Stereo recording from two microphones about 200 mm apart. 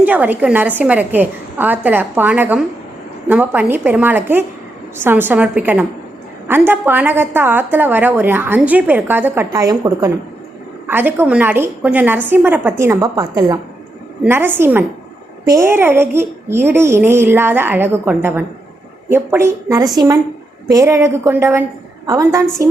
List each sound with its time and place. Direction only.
0.0 s a woman's voice: 10° right (ahead or behind)